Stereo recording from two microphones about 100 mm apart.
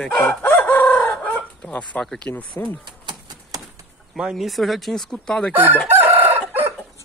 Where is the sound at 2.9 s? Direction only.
45° right (ahead or behind).